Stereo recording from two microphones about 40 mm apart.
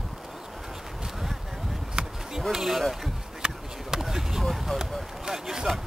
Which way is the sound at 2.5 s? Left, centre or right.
Centre.